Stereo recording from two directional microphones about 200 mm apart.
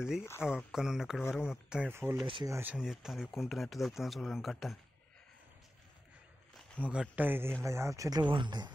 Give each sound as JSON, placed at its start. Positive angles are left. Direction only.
{"t": 0.2, "sound": "speech", "side_deg": 10}
{"t": 0.7, "sound": "speech", "side_deg": 0}
{"t": 2.2, "sound": "speech", "side_deg": -25}
{"t": 2.5, "sound": "speech", "side_deg": -5}
{"t": 6.8, "sound": "speech", "side_deg": -5}